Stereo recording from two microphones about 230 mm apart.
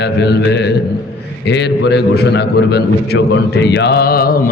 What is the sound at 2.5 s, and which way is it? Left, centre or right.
A man's voice, left.